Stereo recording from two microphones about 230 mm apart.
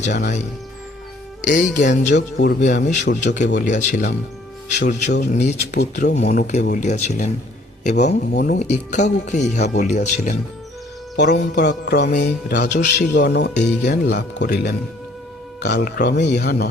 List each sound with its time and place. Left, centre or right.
0.2 s speech: left
2.1 s speech: left
2.7 s speech: left
11.2 s speech: left